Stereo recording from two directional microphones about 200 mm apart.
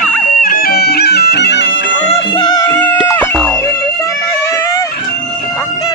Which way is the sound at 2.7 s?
10° left (ahead or behind).